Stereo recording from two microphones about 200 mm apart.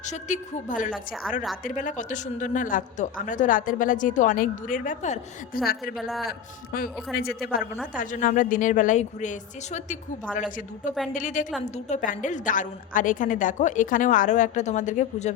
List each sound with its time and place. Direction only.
0.0 s a woman's voice: 35° left (ahead or behind)
0.9 s a woman's voice: centre (ahead or behind)
1.6 s a woman's voice: 40° left (ahead or behind)
5.9 s a woman's voice: centre (ahead or behind)
6.7 s a man's voice: 45° left (ahead or behind)
11.1 s a woman's voice: 40° left (ahead or behind)